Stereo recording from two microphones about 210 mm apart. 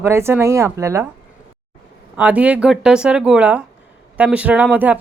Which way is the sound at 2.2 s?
5° right (ahead or behind).